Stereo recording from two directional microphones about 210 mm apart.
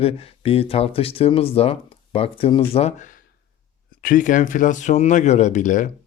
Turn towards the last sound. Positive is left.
turn(degrees=35)  # may be behind; listen again after turning